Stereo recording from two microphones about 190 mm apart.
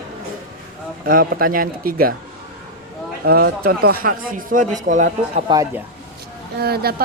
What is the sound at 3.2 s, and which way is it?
A woman's voice, 55° right (ahead or behind).